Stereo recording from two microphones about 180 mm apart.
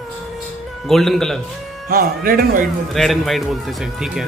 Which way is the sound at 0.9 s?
Centre (ahead or behind).